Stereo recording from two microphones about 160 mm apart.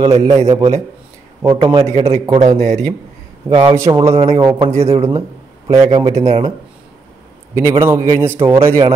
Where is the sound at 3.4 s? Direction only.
10° right (ahead or behind); by 6.2 s 25° right (ahead or behind).